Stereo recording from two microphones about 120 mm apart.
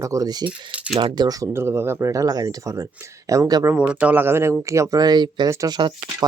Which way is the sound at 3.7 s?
10° right (ahead or behind).